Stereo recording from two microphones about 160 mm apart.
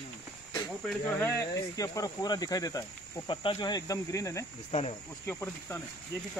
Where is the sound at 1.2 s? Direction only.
15° left (ahead or behind).